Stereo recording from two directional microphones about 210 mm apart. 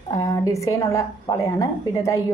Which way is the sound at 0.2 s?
15° left (ahead or behind).